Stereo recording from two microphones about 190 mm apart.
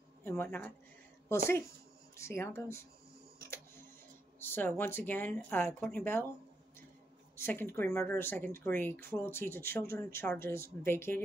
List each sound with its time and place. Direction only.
0.2 s speech: 10° left (ahead or behind)
2.1 s speech: 15° left (ahead or behind)
4.4 s speech: 10° left (ahead or behind)
7.3 s speech: 10° left (ahead or behind)